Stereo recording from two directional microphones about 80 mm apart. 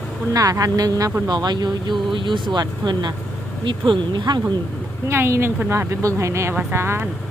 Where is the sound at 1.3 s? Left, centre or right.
Right.